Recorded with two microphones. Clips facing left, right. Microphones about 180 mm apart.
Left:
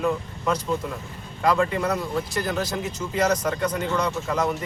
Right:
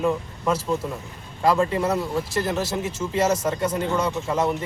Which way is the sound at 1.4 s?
30° right (ahead or behind).